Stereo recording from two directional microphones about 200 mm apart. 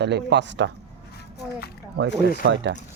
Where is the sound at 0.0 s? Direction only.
60° right (ahead or behind).